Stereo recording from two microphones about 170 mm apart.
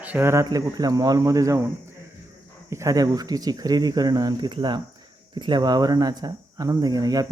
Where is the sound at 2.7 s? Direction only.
20° right (ahead or behind).